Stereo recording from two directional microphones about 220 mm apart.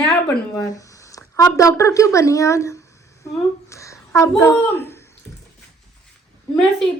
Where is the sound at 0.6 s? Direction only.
15° left (ahead or behind).